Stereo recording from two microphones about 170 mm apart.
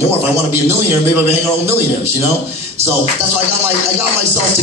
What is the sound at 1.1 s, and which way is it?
Speech, 15° right (ahead or behind).